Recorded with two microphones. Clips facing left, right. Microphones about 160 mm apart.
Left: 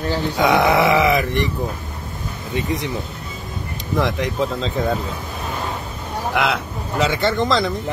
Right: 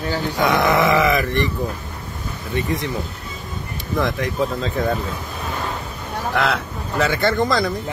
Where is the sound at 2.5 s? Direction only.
15° left (ahead or behind).